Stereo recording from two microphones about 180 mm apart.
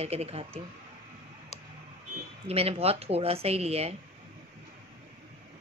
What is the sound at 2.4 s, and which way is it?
A woman's voice, 35° right (ahead or behind).